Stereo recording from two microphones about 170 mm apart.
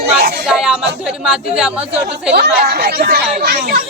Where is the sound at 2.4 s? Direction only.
65° right (ahead or behind).